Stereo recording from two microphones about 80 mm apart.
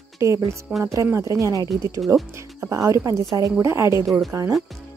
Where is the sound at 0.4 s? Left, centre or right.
Right.